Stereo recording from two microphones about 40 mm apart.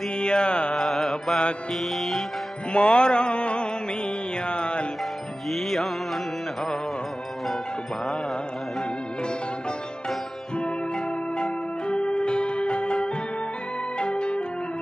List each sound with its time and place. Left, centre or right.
0.2 s music: left
0.7 s music: centre
2.7 s music: left
5.5 s music: centre
11.3 s music: left